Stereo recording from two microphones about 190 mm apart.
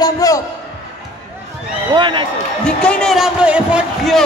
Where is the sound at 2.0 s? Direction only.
25° right (ahead or behind).